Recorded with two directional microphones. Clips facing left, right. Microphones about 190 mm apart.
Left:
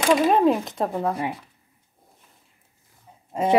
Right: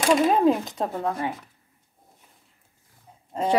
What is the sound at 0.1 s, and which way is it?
Speech, 5° left (ahead or behind).